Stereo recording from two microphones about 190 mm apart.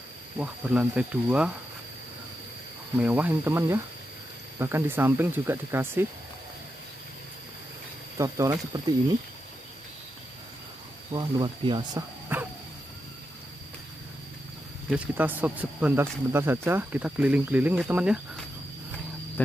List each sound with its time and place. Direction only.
0.4 s speech: 5° right (ahead or behind)
3.0 s speech: 10° right (ahead or behind)
8.2 s speech: 15° right (ahead or behind)
11.1 s speech: 25° right (ahead or behind)
12.3 s dog: 10° right (ahead or behind)
14.9 s speech: 10° right (ahead or behind)